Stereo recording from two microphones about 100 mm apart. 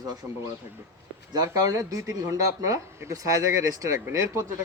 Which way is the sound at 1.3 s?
35° right (ahead or behind).